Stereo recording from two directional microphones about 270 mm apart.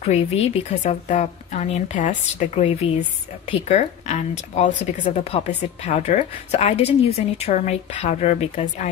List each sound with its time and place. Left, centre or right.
0.0 s a woman's voice: left